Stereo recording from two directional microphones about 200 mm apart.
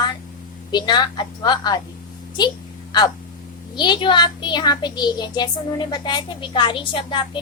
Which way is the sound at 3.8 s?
20° left (ahead or behind).